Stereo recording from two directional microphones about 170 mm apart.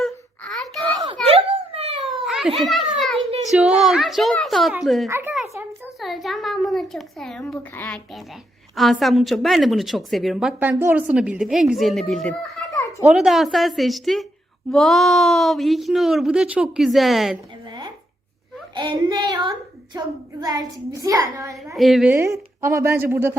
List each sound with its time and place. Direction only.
0.0 s a sound: centre (ahead or behind)
0.8 s a sound: 25° right (ahead or behind)
2.0 s cat: centre (ahead or behind)
2.6 s children playing: centre (ahead or behind)
3.5 s speech: 5° right (ahead or behind)
5.0 s a woman's voice: 15° right (ahead or behind)
6.0 s speech: centre (ahead or behind)
12.7 s a sound: 20° left (ahead or behind)
13.1 s speech: centre (ahead or behind)
17.7 s a sound: 25° right (ahead or behind)
18.7 s a woman's voice: 25° right (ahead or behind)
21.8 s speech: centre (ahead or behind)
22.1 s a woman's voice: 15° right (ahead or behind)